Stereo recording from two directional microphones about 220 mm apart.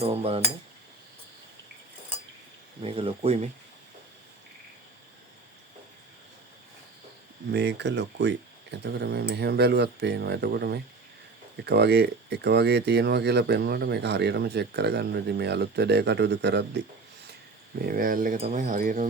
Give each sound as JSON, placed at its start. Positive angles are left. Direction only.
{"t": 0.0, "sound": "speech", "side_deg": -25}
{"t": 2.8, "sound": "speech", "side_deg": -25}
{"t": 7.5, "sound": "speech", "side_deg": -50}